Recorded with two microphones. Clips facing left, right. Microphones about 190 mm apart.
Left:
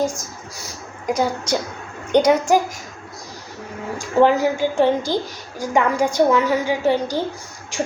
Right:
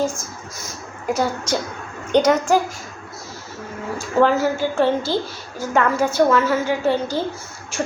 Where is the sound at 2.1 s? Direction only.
10° left (ahead or behind).